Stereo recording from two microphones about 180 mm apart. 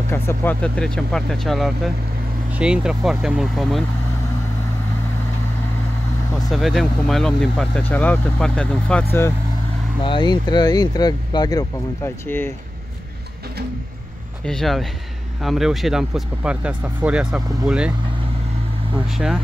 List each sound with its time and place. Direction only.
0.1 s speech: 15° left (ahead or behind)
6.5 s speech: centre (ahead or behind)
10.0 s speech: 25° left (ahead or behind)
14.4 s speech: 5° left (ahead or behind)
19.1 s speech: centre (ahead or behind)